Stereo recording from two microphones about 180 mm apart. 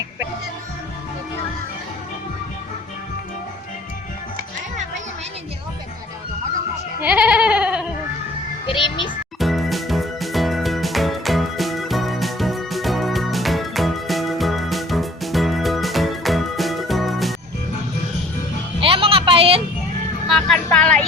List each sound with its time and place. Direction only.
7.0 s goat: 5° right (ahead or behind)
8.6 s music: 30° left (ahead or behind)
9.4 s music: centre (ahead or behind)
18.8 s a sound: 30° right (ahead or behind)
20.2 s vehicle: centre (ahead or behind)